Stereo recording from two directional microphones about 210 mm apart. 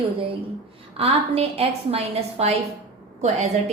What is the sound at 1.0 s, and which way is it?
A woman's voice, 30° right (ahead or behind).